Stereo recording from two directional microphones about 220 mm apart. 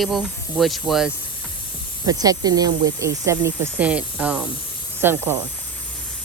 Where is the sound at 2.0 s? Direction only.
15° right (ahead or behind).